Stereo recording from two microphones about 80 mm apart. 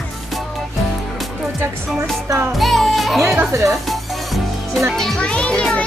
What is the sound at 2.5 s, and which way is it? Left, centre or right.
Speech, centre.